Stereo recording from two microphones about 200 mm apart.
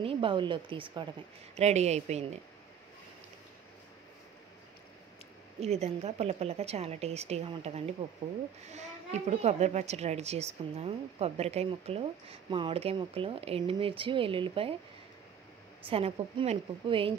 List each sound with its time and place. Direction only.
0.0 s a child's voice: 25° right (ahead or behind)
5.6 s a woman's voice: 30° right (ahead or behind)
15.8 s a child's voice: 25° right (ahead or behind)